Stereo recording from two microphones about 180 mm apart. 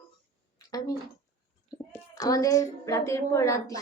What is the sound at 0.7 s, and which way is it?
Speech, 20° left (ahead or behind).